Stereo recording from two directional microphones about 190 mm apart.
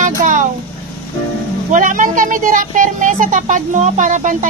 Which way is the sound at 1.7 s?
45° right (ahead or behind).